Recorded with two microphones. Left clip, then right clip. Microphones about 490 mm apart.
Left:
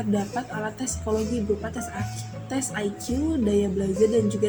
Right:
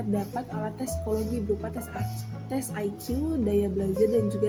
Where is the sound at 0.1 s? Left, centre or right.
Right.